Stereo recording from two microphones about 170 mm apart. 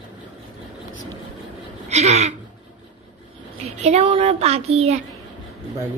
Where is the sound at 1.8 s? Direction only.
40° right (ahead or behind).